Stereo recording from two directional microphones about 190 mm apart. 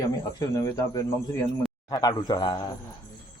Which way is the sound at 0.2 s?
20° left (ahead or behind).